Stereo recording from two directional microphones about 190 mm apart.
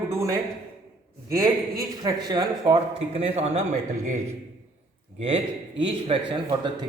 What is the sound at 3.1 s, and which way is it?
Speech, 35° right (ahead or behind).